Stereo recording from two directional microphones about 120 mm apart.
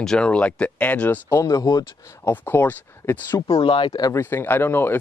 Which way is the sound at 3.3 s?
30° left (ahead or behind).